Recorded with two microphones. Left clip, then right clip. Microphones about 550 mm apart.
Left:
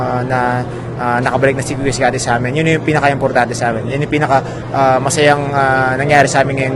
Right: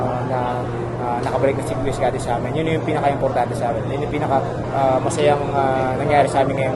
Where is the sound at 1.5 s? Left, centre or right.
Left.